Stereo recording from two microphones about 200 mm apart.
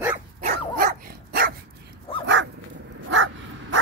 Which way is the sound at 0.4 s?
45° right (ahead or behind).